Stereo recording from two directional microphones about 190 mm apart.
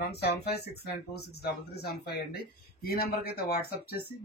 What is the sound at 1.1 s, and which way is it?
Speech, 55° left (ahead or behind).